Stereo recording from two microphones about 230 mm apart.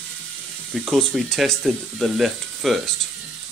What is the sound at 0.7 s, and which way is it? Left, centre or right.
Speech, centre.